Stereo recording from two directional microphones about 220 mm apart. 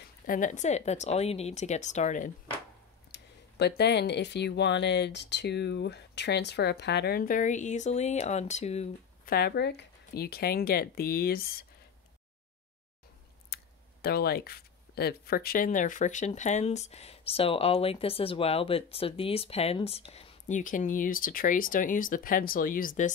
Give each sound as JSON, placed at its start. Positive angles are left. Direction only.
{"t": 0.0, "sound": "speech", "side_deg": 35}
{"t": 3.1, "sound": "speech", "side_deg": 50}
{"t": 9.3, "sound": "speech", "side_deg": 45}
{"t": 13.5, "sound": "a sound", "side_deg": 45}
{"t": 14.0, "sound": "speech", "side_deg": 45}